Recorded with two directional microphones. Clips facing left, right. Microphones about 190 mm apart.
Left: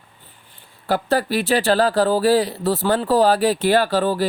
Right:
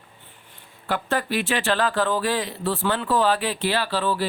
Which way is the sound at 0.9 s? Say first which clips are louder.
Left 5 dB; 35° left (ahead or behind).